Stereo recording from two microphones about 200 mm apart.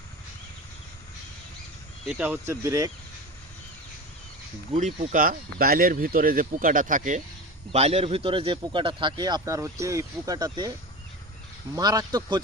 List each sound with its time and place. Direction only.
2.0 s speech: 5° right (ahead or behind)
4.8 s speech: 40° right (ahead or behind); by 10.7 s 20° right (ahead or behind)
11.7 s speech: 20° right (ahead or behind)